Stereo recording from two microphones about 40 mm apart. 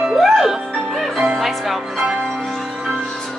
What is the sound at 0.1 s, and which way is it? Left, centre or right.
Music, centre.